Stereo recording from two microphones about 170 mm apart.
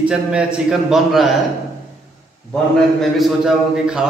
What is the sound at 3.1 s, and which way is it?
Speech, 5° right (ahead or behind).